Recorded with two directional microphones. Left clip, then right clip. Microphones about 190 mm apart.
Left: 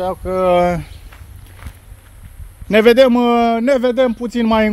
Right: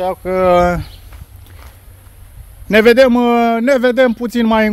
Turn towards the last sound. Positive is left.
turn(degrees=-15)  # may be behind; listen again after turning